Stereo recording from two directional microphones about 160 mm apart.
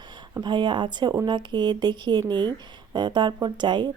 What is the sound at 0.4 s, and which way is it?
Speech, 30° right (ahead or behind).